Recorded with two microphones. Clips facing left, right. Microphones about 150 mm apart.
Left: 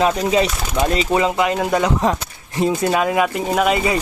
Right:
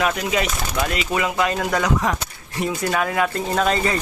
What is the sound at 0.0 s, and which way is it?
Speech, 30° left (ahead or behind).